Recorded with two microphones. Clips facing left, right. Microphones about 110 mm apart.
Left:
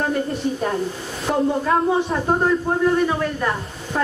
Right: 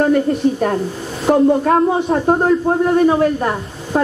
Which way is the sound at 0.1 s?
55° right (ahead or behind).